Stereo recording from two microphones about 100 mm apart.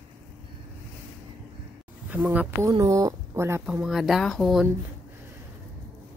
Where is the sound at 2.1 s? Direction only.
15° right (ahead or behind).